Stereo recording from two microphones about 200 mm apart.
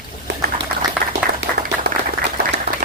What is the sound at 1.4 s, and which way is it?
Clapping, 60° right (ahead or behind).